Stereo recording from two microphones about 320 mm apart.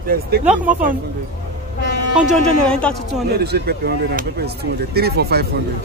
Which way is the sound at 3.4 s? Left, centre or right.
Right.